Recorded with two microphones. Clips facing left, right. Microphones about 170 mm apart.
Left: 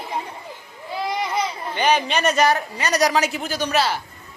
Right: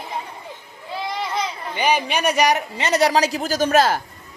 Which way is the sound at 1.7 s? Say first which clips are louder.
Left 1 dB; 10° right (ahead or behind).